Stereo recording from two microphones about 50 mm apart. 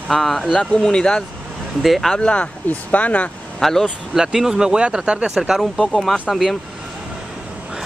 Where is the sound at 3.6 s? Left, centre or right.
Centre.